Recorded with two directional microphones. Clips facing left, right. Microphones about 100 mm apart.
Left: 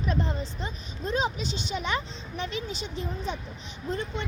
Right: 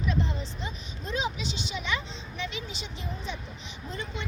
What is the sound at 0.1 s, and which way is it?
A woman's voice, 45° left (ahead or behind).